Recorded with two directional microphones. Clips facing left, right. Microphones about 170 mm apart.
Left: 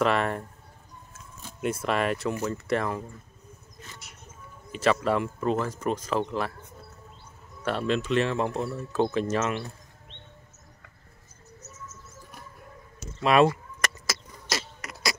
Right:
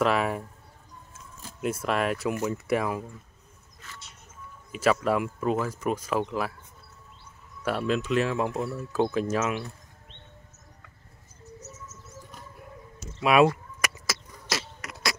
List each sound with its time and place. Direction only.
0.0 s speech: 5° right (ahead or behind)
4.7 s speech: 5° right (ahead or behind)
7.6 s speech: 5° right (ahead or behind)
13.2 s speech: 5° right (ahead or behind)
13.7 s a sound: 10° right (ahead or behind)